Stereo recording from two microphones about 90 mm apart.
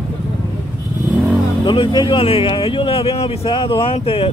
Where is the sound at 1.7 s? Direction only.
60° left (ahead or behind); by 4.3 s 85° left.